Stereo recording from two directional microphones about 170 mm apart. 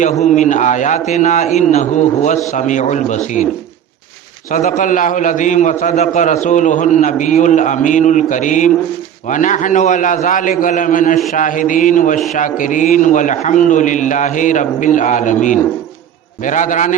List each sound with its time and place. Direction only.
0.0 s a man's voice: 45° left (ahead or behind)
4.5 s a man's voice: 50° left (ahead or behind)